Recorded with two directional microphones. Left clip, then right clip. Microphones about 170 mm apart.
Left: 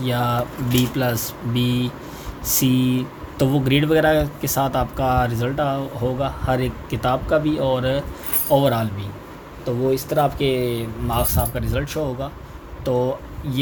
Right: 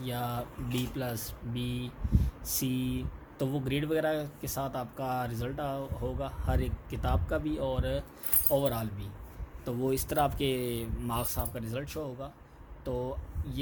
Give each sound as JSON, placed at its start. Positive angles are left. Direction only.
{"t": 0.0, "sound": "speech", "side_deg": 0}
{"t": 9.6, "sound": "speech", "side_deg": -40}